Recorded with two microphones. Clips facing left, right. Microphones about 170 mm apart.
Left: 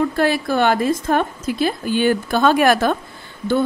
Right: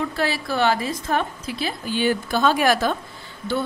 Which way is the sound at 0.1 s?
50° left (ahead or behind).